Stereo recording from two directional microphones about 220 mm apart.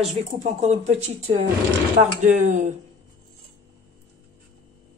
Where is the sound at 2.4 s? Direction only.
35° right (ahead or behind).